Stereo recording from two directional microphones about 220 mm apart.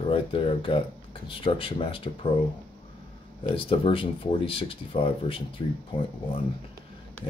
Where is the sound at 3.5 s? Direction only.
25° left (ahead or behind).